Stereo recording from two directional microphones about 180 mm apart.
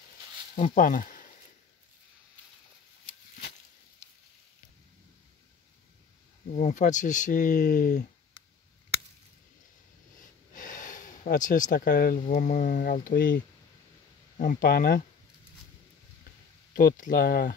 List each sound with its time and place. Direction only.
0.7 s speech: 50° left (ahead or behind)
6.5 s speech: 40° left (ahead or behind)
10.5 s a sound: 45° left (ahead or behind)
11.7 s speech: 55° left (ahead or behind)
16.7 s speech: 50° left (ahead or behind)